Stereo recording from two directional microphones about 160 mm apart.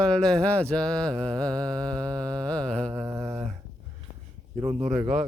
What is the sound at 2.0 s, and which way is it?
Speech, 25° right (ahead or behind).